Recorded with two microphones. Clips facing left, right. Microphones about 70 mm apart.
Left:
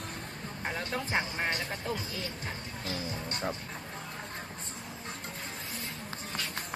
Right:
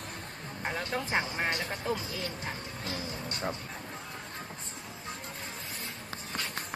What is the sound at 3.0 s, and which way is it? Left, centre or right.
Speech, left.